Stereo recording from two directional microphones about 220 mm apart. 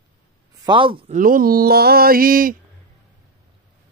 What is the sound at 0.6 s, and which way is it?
Speech, 20° right (ahead or behind).